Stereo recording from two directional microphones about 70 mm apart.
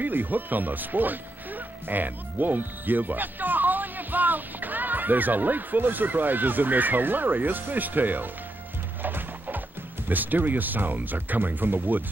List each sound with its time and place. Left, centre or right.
0.0 s speech: right
9.0 s music: right
10.0 s speech: right